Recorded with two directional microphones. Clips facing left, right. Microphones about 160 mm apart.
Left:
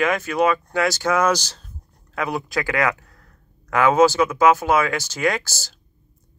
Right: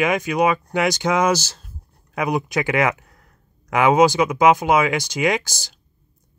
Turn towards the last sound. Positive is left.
turn(degrees=-15)  # may be behind; listen again after turning